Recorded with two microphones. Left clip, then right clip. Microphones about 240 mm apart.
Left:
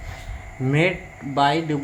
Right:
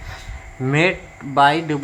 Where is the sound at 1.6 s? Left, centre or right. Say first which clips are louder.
Right 2 dB; centre.